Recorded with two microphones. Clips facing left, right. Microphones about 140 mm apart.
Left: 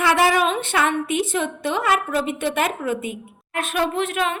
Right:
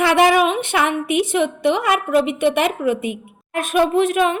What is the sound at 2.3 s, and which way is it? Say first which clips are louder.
Speech: right 7 dB; 60° right (ahead or behind).